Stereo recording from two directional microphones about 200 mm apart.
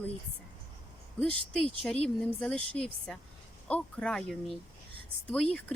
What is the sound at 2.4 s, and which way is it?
Speech, 5° left (ahead or behind).